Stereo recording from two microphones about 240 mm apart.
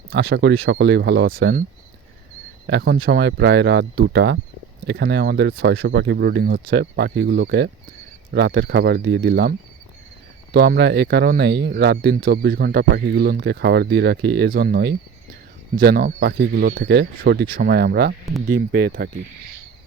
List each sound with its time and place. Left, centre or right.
0.1 s speech: right
2.6 s speech: right